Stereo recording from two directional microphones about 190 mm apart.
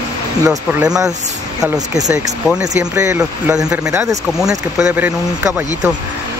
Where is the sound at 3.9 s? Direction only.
15° right (ahead or behind).